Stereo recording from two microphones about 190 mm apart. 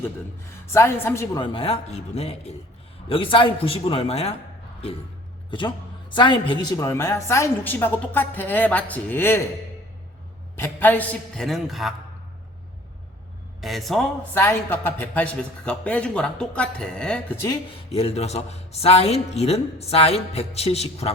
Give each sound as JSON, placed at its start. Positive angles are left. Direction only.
{"t": 0.6, "sound": "a man's voice", "side_deg": 15}
{"t": 5.5, "sound": "speech", "side_deg": 25}
{"t": 10.6, "sound": "a man's voice", "side_deg": 10}
{"t": 13.6, "sound": "a man's voice", "side_deg": 0}
{"t": 14.3, "sound": "speech", "side_deg": 10}
{"t": 17.9, "sound": "speech", "side_deg": 35}